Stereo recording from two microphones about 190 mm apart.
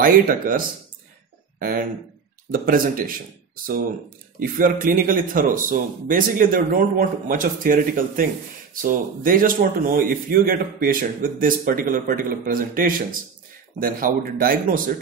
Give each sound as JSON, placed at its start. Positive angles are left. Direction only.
{"t": 0.0, "sound": "a man's voice", "side_deg": -45}